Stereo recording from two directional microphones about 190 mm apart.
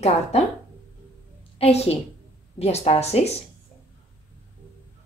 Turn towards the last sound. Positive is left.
turn(degrees=35)  # may be behind; listen again after turning